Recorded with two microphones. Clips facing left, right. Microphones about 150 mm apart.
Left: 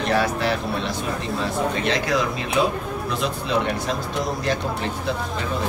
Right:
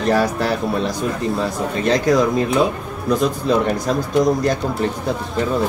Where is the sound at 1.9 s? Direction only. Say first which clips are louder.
Right 7 dB; 40° right (ahead or behind).